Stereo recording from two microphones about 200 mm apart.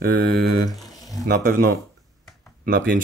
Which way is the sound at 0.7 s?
Centre (ahead or behind).